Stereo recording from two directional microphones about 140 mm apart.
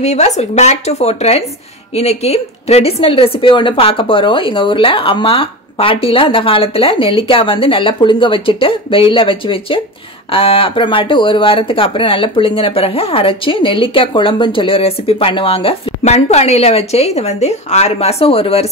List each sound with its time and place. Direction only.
0.0 s speech: 55° left (ahead or behind)